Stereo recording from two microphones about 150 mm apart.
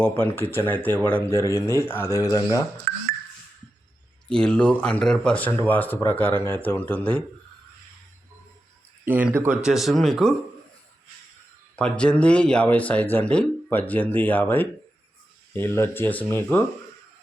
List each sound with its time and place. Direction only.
0.0 s speech: 10° left (ahead or behind)
2.9 s music: 70° right (ahead or behind)
4.3 s speech: 5° left (ahead or behind)
9.0 s speech: 10° right (ahead or behind)
9.6 s speech: centre (ahead or behind)
11.8 s speech: 5° left (ahead or behind)